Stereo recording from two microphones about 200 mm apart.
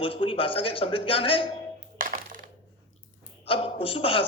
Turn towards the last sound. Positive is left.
turn(degrees=25)  # may be behind; listen again after turning